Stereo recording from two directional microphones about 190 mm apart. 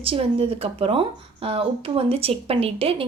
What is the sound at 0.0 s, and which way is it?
Speech, 30° right (ahead or behind).